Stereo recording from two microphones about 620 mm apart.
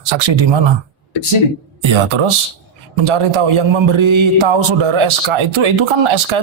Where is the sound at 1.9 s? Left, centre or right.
Right.